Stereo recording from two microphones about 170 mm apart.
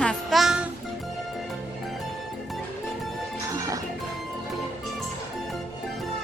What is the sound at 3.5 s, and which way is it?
Music, 20° right (ahead or behind).